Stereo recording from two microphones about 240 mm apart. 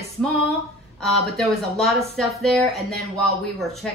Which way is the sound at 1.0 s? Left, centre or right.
Centre.